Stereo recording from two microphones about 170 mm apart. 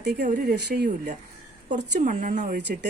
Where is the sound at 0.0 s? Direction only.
80° right.